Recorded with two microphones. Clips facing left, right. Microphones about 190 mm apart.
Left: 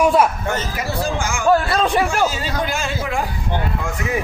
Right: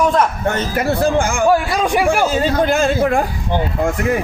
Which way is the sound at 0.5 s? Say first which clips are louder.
Right 6 dB; 60° right (ahead or behind).